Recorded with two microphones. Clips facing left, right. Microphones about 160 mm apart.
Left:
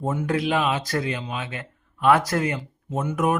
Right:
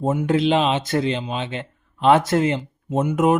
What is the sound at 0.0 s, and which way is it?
Speech, 25° right (ahead or behind).